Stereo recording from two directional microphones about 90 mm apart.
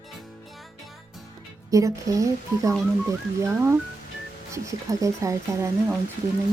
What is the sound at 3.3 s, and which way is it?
Speech, 30° right (ahead or behind).